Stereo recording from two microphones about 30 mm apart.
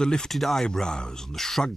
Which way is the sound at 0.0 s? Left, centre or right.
Left.